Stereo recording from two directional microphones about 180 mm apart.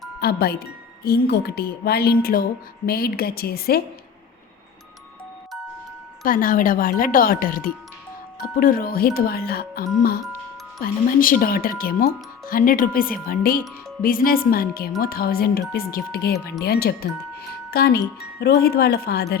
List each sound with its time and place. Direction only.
0.2 s speech: 60° left (ahead or behind)
6.2 s speech: 50° left (ahead or behind)